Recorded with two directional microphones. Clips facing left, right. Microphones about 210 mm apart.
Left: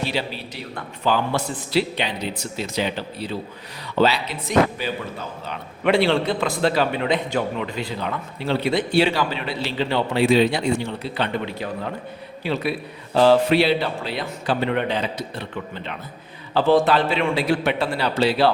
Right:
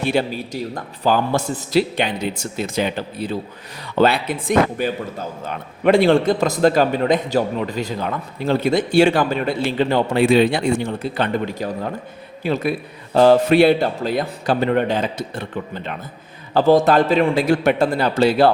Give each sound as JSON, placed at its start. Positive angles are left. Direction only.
{"t": 0.0, "sound": "a man's voice", "side_deg": -50}